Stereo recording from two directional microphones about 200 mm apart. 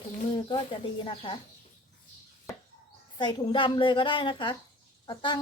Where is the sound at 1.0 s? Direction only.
25° left (ahead or behind).